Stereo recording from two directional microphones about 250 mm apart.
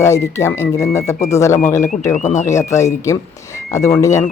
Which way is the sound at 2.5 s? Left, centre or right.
Centre.